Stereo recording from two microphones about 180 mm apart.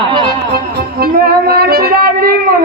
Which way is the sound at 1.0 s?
60° right (ahead or behind).